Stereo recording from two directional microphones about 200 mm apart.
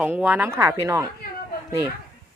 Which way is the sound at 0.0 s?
5° right (ahead or behind).